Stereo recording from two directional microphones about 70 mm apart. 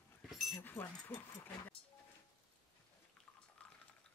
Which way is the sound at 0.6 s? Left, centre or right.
Left.